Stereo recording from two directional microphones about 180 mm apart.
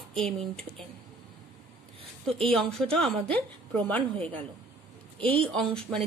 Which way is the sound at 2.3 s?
Centre (ahead or behind).